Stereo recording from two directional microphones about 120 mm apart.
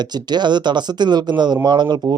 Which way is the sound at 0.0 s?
35° right (ahead or behind).